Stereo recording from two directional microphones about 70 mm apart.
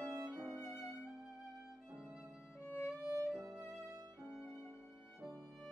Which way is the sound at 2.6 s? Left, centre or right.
Left.